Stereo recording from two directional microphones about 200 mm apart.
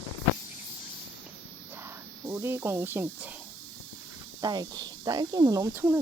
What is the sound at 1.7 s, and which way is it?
Speech, 10° right (ahead or behind).